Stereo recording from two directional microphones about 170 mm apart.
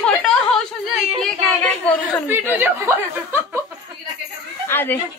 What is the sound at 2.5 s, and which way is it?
Speech, 10° right (ahead or behind).